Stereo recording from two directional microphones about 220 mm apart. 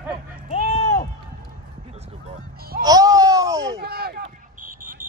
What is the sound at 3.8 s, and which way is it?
Speech, 45° right (ahead or behind).